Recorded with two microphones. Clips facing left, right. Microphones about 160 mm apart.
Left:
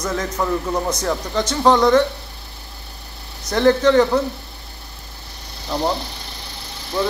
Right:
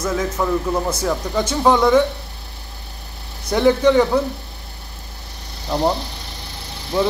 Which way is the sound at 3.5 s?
10° right (ahead or behind).